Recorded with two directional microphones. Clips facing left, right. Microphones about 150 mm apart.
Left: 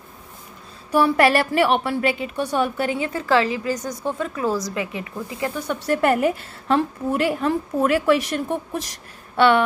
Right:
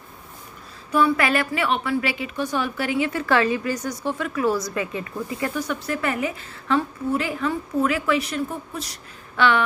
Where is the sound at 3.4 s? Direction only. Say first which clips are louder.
Right 1 dB; 25° left (ahead or behind).